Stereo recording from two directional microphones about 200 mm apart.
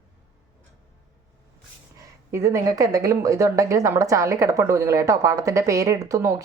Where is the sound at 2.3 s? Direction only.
15° right (ahead or behind).